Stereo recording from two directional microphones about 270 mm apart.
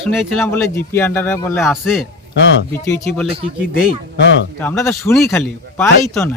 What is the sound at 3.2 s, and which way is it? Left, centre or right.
Speech, right.